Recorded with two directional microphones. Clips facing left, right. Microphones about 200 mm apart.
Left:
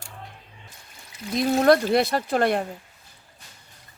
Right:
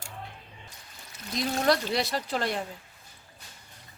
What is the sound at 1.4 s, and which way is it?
Speech, 55° left (ahead or behind).